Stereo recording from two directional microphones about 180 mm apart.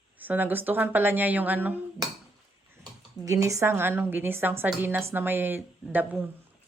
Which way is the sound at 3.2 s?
20° right (ahead or behind).